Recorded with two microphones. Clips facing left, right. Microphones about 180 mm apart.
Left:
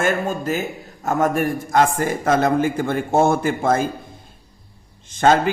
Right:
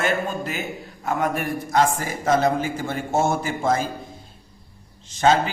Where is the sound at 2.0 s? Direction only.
55° left (ahead or behind).